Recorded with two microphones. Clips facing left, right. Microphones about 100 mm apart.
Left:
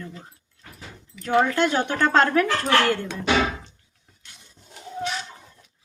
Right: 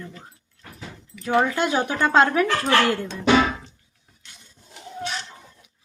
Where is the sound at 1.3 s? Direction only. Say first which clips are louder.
Left 1 dB; 10° right (ahead or behind).